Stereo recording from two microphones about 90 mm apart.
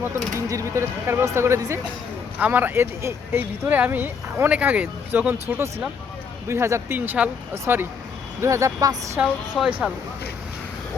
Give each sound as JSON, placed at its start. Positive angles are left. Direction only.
{"t": 0.3, "sound": "speech", "side_deg": -35}
{"t": 2.4, "sound": "speech", "side_deg": -20}
{"t": 9.2, "sound": "speech", "side_deg": -15}
{"t": 9.6, "sound": "speech", "side_deg": 0}